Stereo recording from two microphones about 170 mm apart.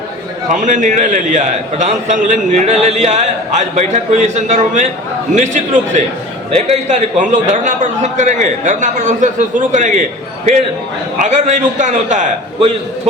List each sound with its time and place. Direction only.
0.6 s a man's voice: 45° right (ahead or behind)
11.2 s a man's voice: 45° right (ahead or behind)